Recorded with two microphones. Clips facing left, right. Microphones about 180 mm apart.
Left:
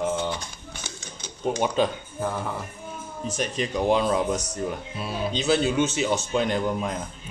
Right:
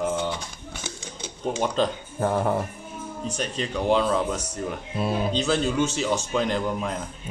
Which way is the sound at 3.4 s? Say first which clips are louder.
Left 2 dB; 10° left (ahead or behind).